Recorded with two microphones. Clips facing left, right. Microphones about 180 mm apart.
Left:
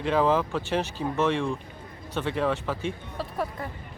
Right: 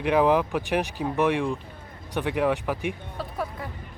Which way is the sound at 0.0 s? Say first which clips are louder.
Right 2 dB; 15° right (ahead or behind).